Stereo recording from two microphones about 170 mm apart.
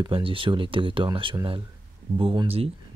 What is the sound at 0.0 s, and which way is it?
Speech, 30° right (ahead or behind).